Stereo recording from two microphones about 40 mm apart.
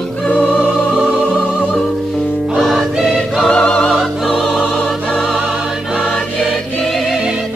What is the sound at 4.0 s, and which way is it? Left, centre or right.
Music, centre.